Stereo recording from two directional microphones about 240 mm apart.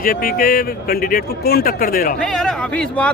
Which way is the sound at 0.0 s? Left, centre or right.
Left.